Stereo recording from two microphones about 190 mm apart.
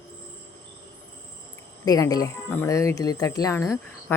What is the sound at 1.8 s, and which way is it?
Speech, 20° left (ahead or behind).